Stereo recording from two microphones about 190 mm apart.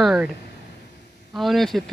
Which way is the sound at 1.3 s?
Centre (ahead or behind).